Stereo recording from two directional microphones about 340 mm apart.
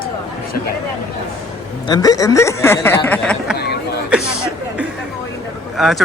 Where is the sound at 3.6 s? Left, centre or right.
Left.